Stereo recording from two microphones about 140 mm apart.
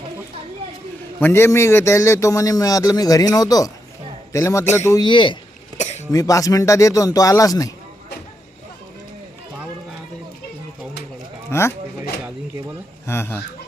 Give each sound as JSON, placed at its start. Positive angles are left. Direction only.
{"t": 1.2, "sound": "a man's voice", "side_deg": 20}
{"t": 5.0, "sound": "a man's voice", "side_deg": 35}
{"t": 5.7, "sound": "cough", "side_deg": 55}
{"t": 6.1, "sound": "a man's voice", "side_deg": 25}
{"t": 11.5, "sound": "a man's voice", "side_deg": 20}
{"t": 13.1, "sound": "speech", "side_deg": 15}